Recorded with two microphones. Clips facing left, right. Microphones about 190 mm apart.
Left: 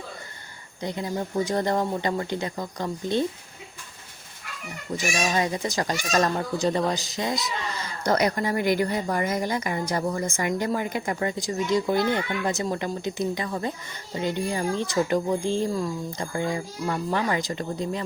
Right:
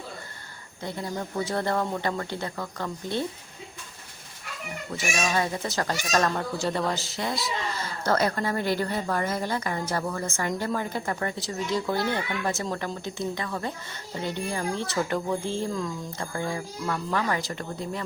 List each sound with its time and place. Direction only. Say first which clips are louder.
0.8 s a woman's voice: left 3 dB; 20° left (ahead or behind)
5.3 s a woman's voice: left 2 dB; 15° left (ahead or behind)